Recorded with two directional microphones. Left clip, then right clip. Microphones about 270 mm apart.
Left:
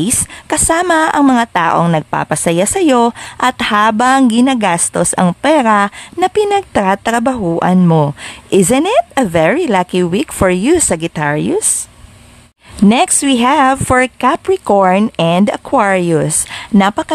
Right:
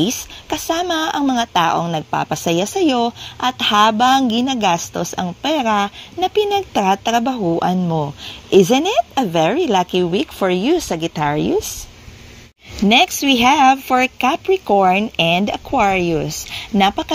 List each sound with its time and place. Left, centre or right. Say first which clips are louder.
0.0 s a woman's voice: left 2 dB; left
12.8 s speech: left 2 dB; centre